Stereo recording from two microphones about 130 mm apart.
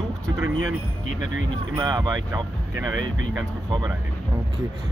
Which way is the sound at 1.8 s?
30° right (ahead or behind).